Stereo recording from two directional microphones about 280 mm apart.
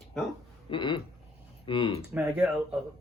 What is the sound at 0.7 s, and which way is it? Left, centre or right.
A man's voice, centre.